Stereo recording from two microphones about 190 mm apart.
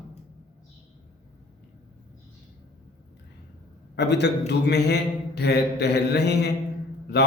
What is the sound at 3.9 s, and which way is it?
A man's voice, 65° left (ahead or behind).